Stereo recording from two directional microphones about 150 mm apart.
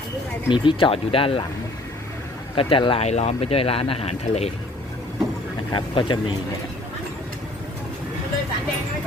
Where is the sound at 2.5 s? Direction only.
35° left (ahead or behind).